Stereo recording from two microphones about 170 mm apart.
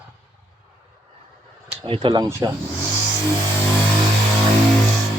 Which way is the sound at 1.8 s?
30° right (ahead or behind).